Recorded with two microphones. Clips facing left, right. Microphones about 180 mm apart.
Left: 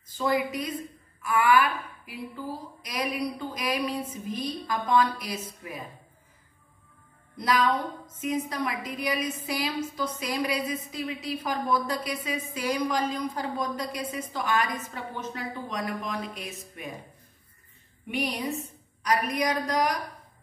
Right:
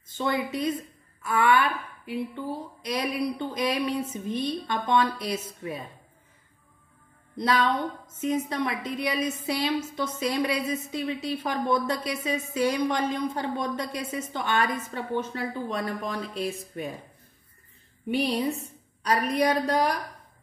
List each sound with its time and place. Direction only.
0.2 s a woman's voice: 25° right (ahead or behind)
7.3 s a woman's voice: 25° right (ahead or behind)
18.0 s a woman's voice: 30° right (ahead or behind)